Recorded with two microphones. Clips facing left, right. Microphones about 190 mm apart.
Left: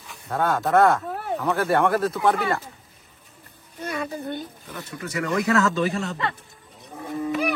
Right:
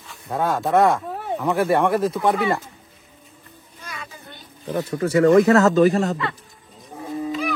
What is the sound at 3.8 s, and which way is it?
Child singing, 60° left (ahead or behind).